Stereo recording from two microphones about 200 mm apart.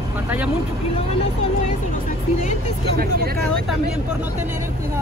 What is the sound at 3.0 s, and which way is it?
Speech, 50° right (ahead or behind).